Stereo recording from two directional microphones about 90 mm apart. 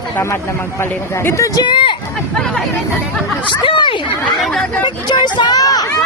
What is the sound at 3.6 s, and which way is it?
Speech, 65° left (ahead or behind).